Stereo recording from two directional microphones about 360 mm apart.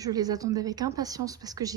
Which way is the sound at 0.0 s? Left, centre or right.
Centre.